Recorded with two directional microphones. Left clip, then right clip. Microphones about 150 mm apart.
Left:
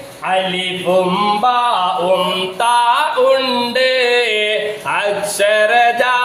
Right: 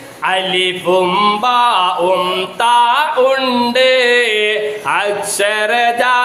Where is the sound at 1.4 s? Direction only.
35° right (ahead or behind).